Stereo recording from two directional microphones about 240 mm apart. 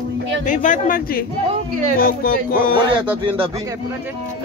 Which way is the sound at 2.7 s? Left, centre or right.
Centre.